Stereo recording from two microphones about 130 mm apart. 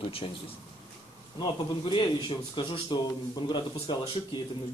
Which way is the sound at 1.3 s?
40° left (ahead or behind).